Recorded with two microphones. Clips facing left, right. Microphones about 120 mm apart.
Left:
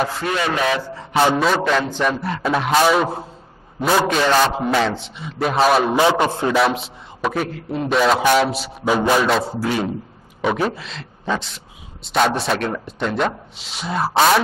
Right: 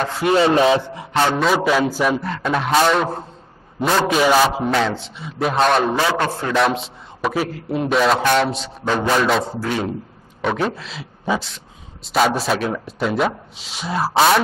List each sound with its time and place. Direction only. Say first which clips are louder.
0.3 s rub: right 9 dB; 30° right (ahead or behind)
1.1 s speech: left 1 dB; 5° left (ahead or behind)
4.2 s a man's voice: right 1 dB; 10° right (ahead or behind)
5.9 s a man's voice: left 3 dB; 15° left (ahead or behind)
6.5 s speech: even; centre (ahead or behind)